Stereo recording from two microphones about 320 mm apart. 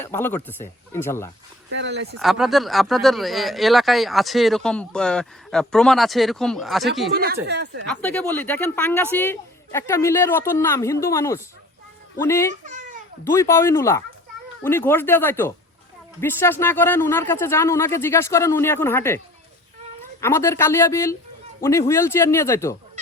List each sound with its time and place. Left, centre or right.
0.0 s speech: centre
1.7 s speech: right
2.1 s speech: centre
7.1 s speech: right
7.9 s speech: centre
12.6 s babbling: right
13.3 s speech: centre
20.2 s speech: centre